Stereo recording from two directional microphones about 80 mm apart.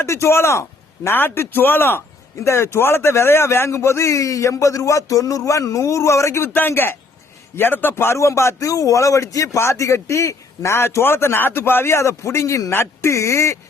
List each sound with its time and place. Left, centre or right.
0.0 s a man's voice: left
6.5 s a man's voice: left